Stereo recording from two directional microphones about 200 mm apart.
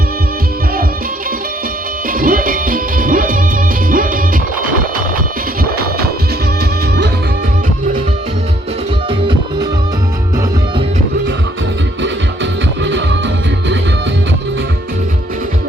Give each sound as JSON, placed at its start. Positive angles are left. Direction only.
{"t": 2.0, "sound": "music", "side_deg": -45}
{"t": 9.0, "sound": "music", "side_deg": -25}
{"t": 12.0, "sound": "music", "side_deg": -65}